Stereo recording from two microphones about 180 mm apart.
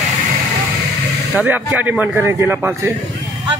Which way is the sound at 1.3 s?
10° right (ahead or behind).